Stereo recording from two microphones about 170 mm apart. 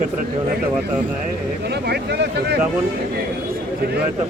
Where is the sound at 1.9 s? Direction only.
75° right (ahead or behind).